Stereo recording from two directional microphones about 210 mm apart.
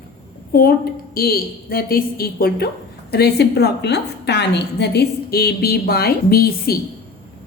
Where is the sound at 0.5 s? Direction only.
45° left (ahead or behind).